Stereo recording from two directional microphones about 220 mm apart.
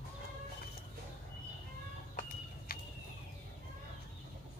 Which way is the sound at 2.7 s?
40° left (ahead or behind).